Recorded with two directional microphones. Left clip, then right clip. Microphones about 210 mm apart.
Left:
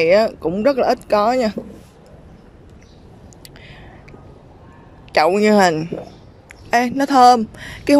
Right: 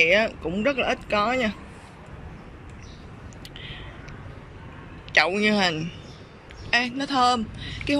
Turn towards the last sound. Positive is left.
turn(degrees=30)  # may be behind; listen again after turning